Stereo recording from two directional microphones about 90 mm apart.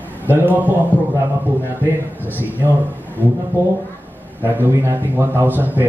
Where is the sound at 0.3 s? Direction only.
20° right (ahead or behind).